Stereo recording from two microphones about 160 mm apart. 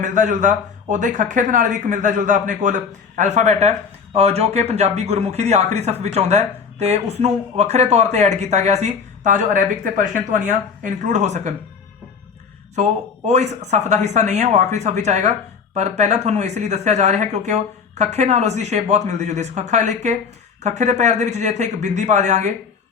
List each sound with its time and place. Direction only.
0.0 s speech: 50° right (ahead or behind)
12.7 s speech: 45° right (ahead or behind)